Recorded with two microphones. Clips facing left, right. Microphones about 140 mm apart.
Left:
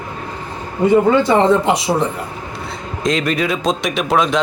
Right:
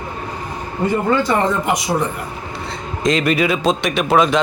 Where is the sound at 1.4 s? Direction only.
25° left (ahead or behind).